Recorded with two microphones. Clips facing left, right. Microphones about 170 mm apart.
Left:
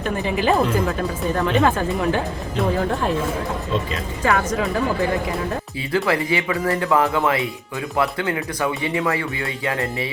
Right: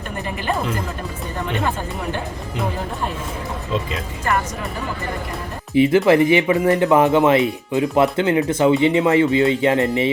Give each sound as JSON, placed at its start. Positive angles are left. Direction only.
{"t": 4.2, "sound": "speech", "side_deg": 90}
{"t": 5.7, "sound": "speech", "side_deg": -20}